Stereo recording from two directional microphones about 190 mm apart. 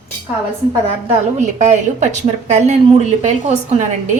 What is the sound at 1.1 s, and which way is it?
A woman's voice, 40° right (ahead or behind).